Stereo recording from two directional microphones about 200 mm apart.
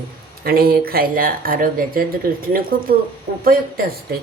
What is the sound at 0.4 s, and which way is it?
Speech, 50° right (ahead or behind).